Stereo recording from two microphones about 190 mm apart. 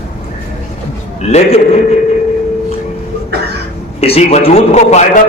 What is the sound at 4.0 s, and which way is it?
A man's voice, 30° left (ahead or behind).